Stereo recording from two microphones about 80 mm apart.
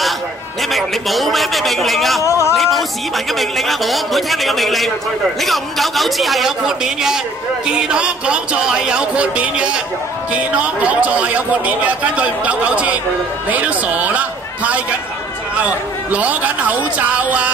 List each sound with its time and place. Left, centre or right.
0.6 s a man's voice: centre
2.2 s speech: left
2.5 s a man's voice: centre